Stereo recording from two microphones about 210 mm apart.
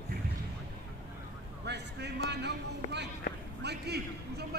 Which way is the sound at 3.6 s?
50° right (ahead or behind).